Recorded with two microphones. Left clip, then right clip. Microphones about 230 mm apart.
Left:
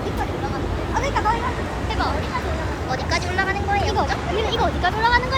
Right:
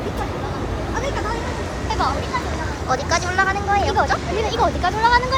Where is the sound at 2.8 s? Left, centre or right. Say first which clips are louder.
Right 5 dB; centre.